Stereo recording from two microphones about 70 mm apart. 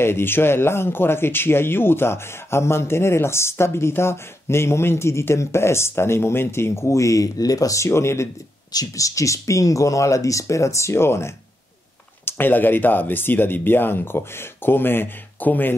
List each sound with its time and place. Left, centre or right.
0.0 s speech: left
8.7 s speech: left